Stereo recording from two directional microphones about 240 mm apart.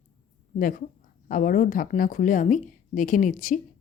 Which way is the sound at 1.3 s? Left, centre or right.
Left.